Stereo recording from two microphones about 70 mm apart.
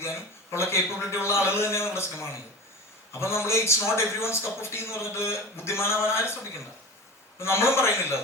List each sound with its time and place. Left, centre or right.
0.0 s a man's voice: left
7.3 s a man's voice: left